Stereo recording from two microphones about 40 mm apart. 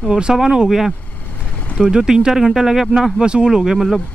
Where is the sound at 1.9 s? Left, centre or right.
Centre.